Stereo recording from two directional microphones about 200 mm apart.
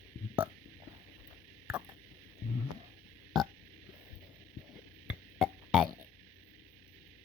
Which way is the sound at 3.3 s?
Centre (ahead or behind).